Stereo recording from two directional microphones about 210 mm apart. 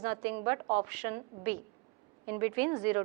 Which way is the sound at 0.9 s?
10° right (ahead or behind).